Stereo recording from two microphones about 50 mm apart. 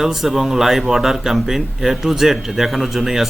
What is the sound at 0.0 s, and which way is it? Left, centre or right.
Speech, centre.